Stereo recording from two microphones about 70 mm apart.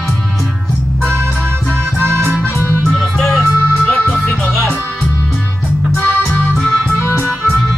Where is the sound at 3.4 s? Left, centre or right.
Centre.